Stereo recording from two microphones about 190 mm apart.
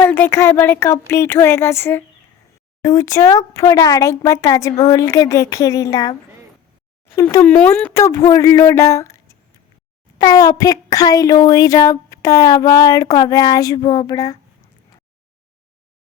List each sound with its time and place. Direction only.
0.0 s speech: 10° left (ahead or behind)
7.2 s speech: 15° left (ahead or behind)
10.2 s speech: 20° left (ahead or behind)